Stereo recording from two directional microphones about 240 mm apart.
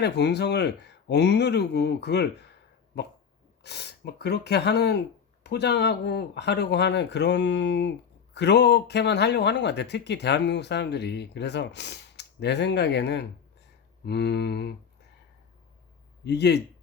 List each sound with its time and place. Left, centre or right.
0.0 s speech: left
16.2 s speech: left